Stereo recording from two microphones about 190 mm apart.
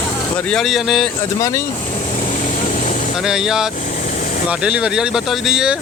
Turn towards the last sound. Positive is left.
turn(degrees=-5)  # may be behind; listen again after turning